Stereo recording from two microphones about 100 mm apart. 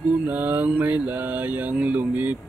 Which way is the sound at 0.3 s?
15° right (ahead or behind).